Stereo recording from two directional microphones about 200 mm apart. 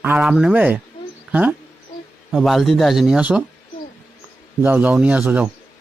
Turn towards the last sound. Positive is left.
turn(degrees=-10)  # may be behind; listen again after turning